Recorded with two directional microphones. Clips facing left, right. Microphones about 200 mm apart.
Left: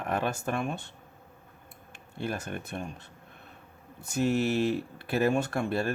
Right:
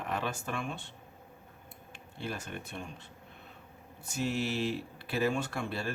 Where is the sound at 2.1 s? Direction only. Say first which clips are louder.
Left 5 dB; 50° left (ahead or behind).